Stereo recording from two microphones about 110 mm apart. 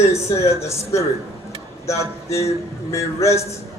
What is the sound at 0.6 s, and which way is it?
A man's voice, 25° left (ahead or behind).